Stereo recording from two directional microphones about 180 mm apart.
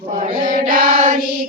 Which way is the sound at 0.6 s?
50° right (ahead or behind).